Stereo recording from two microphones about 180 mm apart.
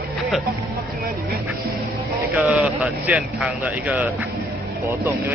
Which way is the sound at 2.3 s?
5° right (ahead or behind).